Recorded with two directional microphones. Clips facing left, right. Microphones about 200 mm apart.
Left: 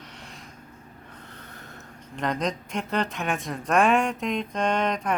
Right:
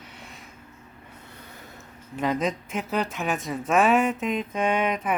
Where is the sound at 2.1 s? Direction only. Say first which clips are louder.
Right 2 dB; 5° right (ahead or behind).